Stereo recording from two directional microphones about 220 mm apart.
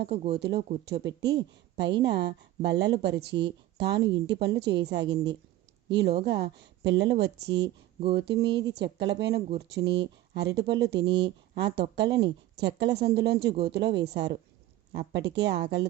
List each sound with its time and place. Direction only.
0.0 s speech: 45° right (ahead or behind)
2.0 s speech: 50° right (ahead or behind)
7.5 s speech: 25° right (ahead or behind)
8.1 s speech: 50° right (ahead or behind)